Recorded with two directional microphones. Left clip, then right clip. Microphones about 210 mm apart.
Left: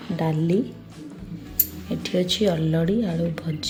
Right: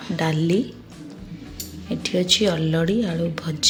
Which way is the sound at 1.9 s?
Centre (ahead or behind).